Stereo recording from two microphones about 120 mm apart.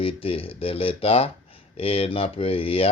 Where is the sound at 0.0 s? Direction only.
50° left (ahead or behind).